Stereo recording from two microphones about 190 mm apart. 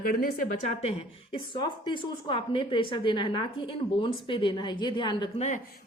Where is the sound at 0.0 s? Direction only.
50° left (ahead or behind).